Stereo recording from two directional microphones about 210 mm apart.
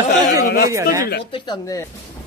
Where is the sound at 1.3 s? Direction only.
20° left (ahead or behind).